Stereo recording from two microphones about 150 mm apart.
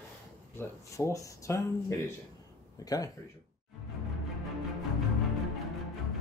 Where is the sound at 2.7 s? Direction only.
25° left (ahead or behind).